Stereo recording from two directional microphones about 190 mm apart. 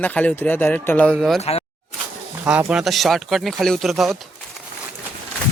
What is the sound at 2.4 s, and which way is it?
Speech, 5° right (ahead or behind).